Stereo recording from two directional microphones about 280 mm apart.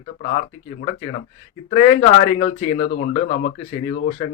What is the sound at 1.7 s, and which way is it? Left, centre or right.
Speech, left.